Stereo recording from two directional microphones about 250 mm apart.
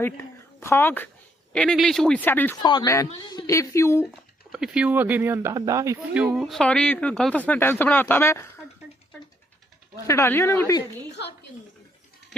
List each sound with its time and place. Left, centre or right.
0.6 s speech: centre
4.5 s speech: centre
10.1 s speech: centre
11.2 s a woman's voice: left